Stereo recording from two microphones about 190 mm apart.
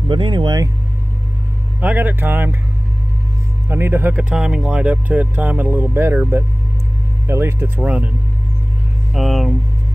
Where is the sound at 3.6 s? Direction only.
10° right (ahead or behind).